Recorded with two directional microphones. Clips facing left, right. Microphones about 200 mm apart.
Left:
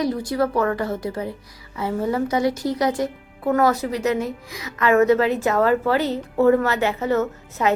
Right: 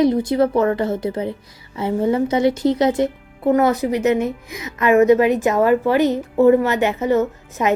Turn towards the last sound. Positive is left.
turn(degrees=-15)  # may be behind; listen again after turning